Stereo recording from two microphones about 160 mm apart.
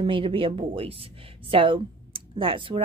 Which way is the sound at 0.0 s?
35° right (ahead or behind).